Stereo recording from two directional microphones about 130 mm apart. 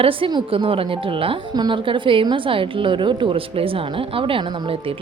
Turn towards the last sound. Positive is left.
turn(degrees=-40)  # may be behind; listen again after turning